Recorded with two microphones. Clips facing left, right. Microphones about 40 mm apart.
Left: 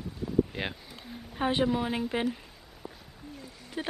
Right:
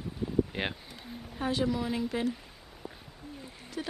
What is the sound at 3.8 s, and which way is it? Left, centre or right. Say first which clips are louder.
Speech: left 3 dB; left.